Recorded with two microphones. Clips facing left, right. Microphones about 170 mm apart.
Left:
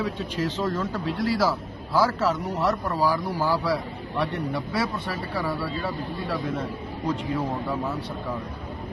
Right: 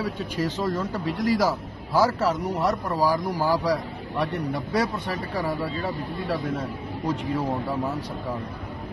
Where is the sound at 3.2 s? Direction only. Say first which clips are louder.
Right 1 dB; 15° right (ahead or behind).